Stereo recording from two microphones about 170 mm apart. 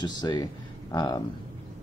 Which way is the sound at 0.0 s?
25° left (ahead or behind).